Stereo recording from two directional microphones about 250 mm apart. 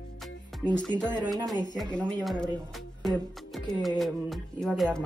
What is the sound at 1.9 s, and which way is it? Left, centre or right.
Speech, centre.